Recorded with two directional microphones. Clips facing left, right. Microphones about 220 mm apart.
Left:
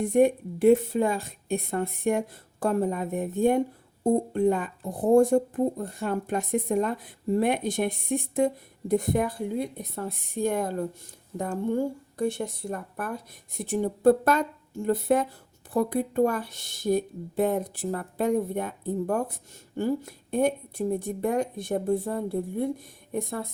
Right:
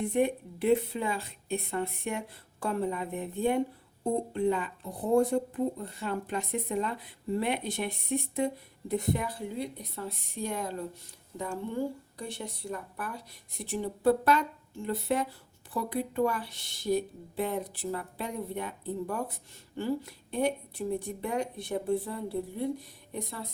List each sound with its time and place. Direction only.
0.0 s speech: 45° left (ahead or behind)